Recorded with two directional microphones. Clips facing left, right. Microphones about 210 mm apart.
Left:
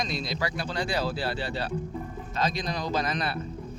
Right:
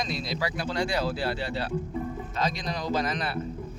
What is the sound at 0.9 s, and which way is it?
Speech, 30° left (ahead or behind).